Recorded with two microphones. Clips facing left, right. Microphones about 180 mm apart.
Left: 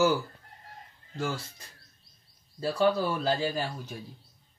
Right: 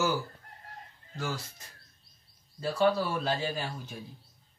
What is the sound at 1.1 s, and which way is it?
Speech, 25° left (ahead or behind).